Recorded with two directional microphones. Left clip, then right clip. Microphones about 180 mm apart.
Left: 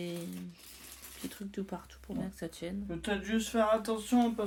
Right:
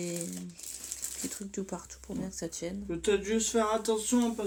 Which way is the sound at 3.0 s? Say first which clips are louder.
Right 7 dB; 40° left (ahead or behind).